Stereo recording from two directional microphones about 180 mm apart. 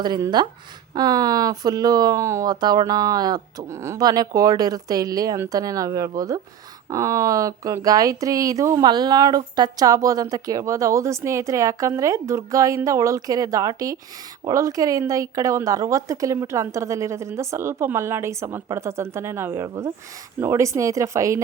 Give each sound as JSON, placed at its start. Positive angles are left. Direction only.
{"t": 0.0, "sound": "speech", "side_deg": -25}